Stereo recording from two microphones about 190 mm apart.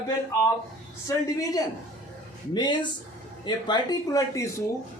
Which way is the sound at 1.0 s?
20° left (ahead or behind).